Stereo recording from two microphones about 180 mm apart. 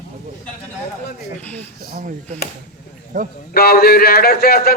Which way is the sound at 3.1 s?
45° right (ahead or behind).